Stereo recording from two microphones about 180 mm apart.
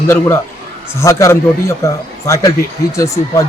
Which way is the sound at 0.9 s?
15° left (ahead or behind).